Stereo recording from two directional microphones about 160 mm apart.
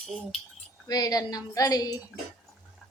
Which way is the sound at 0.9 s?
25° left (ahead or behind).